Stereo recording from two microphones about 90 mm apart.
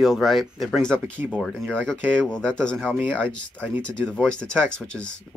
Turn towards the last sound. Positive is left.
turn(degrees=10)  # may be behind; listen again after turning